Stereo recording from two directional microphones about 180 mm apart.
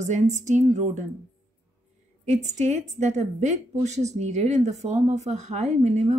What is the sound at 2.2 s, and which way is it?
Speech, 40° right (ahead or behind).